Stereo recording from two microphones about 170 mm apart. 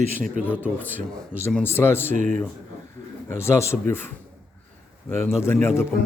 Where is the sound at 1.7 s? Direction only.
15° left (ahead or behind).